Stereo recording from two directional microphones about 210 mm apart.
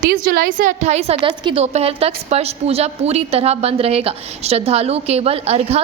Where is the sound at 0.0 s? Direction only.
45° right (ahead or behind).